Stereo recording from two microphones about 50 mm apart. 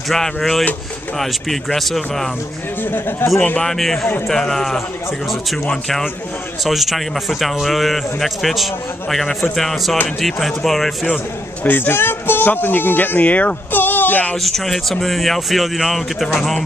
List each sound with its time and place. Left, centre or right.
0.1 s a man's voice: centre
2.8 s speech: left
3.6 s a man's voice: centre
6.6 s a man's voice: centre
11.6 s speech: left
14.3 s a man's voice: centre